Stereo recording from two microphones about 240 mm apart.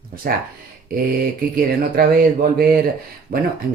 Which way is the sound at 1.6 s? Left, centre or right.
Right.